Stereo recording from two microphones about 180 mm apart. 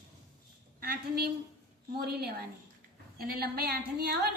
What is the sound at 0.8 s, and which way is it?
A woman's voice, 60° right (ahead or behind).